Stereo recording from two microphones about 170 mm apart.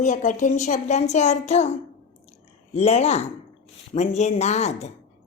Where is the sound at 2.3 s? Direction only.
40° left (ahead or behind).